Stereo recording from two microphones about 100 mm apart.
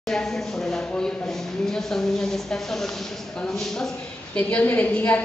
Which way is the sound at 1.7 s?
5° left (ahead or behind).